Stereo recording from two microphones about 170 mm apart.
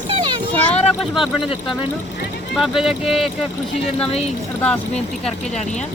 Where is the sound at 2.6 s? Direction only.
Centre (ahead or behind).